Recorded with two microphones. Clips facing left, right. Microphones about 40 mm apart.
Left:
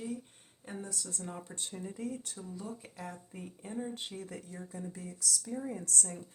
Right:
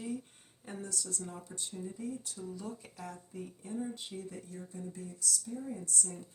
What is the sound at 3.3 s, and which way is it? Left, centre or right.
Speech, left.